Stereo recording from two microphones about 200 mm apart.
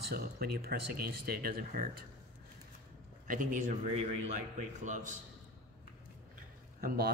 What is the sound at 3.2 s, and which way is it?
A man's voice, 40° right (ahead or behind).